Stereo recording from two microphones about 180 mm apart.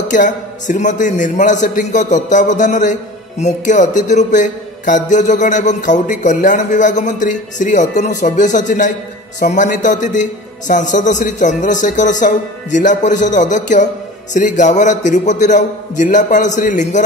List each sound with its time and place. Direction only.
0.1 s a man's voice: 45° left (ahead or behind)